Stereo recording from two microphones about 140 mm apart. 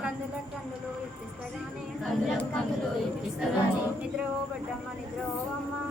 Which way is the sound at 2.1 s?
5° left (ahead or behind).